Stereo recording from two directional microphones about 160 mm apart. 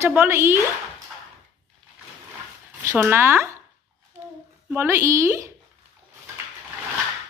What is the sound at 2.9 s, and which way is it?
Speech, 15° right (ahead or behind).